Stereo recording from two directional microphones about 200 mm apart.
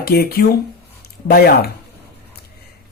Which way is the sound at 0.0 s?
50° left (ahead or behind).